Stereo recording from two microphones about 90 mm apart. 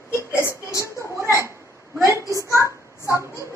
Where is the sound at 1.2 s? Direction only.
30° right (ahead or behind).